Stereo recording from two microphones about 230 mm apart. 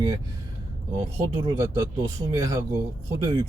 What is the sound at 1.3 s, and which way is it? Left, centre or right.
Speech, centre.